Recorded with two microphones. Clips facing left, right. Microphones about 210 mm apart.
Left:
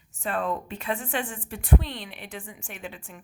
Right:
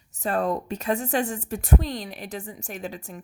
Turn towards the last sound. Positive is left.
turn(degrees=-40)  # may be behind; listen again after turning